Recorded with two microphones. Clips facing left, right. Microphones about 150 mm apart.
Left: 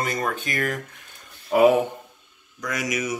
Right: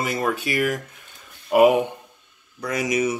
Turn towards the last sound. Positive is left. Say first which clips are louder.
# right 4 dB
turn(degrees=-25)  # may be behind; listen again after turning